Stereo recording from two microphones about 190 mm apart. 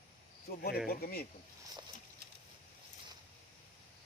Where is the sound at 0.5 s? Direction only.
50° left (ahead or behind).